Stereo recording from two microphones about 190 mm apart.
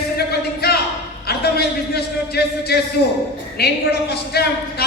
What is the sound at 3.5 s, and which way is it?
A man's voice, 55° left (ahead or behind).